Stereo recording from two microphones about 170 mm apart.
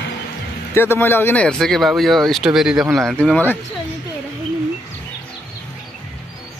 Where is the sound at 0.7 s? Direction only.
10° left (ahead or behind).